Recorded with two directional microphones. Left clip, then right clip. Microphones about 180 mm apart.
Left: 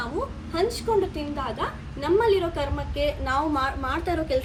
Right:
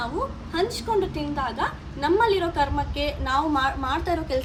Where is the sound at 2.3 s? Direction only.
30° right (ahead or behind).